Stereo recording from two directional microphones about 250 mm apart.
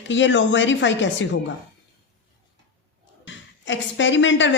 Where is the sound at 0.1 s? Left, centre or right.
Left.